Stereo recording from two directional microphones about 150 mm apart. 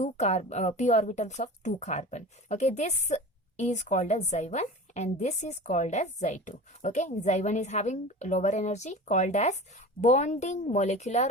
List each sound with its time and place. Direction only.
0.0 s a woman's voice: 50° left (ahead or behind)